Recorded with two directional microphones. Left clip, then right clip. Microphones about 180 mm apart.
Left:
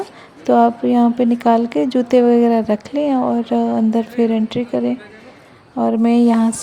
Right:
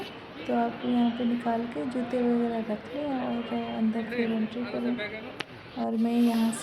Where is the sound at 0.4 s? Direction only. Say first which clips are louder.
Left 15 dB; 50° left (ahead or behind).